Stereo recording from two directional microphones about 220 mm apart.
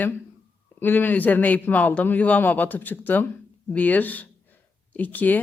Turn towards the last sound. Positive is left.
turn(degrees=5)  # may be behind; listen again after turning